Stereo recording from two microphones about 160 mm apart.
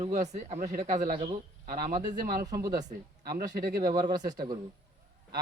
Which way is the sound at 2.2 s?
75° right (ahead or behind).